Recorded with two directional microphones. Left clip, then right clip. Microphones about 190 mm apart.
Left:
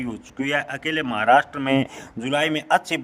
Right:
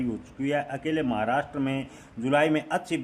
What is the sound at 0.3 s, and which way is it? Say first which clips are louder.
A man's voice: left 5 dB; 45° left (ahead or behind).